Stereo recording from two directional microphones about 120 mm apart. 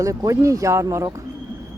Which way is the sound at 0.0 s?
25° right (ahead or behind).